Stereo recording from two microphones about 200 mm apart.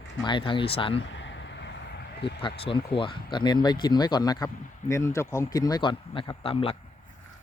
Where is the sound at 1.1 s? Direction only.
65° left (ahead or behind).